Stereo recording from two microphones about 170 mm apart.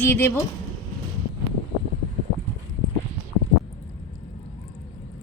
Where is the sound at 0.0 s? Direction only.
15° left (ahead or behind).